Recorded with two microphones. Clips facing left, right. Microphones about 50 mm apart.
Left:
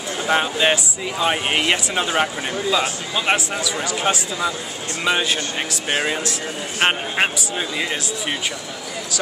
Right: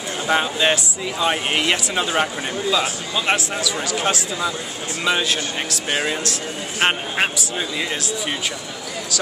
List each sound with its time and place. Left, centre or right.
0.3 s speech: centre